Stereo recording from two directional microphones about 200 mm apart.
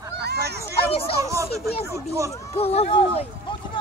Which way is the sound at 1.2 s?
15° right (ahead or behind).